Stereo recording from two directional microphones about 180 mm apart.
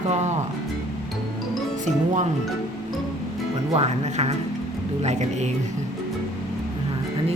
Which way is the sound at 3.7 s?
40° right (ahead or behind).